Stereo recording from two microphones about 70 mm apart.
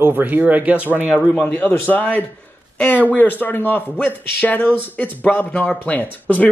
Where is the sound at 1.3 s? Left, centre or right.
Centre.